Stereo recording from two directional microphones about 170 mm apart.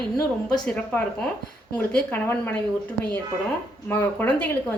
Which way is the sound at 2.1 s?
15° left (ahead or behind).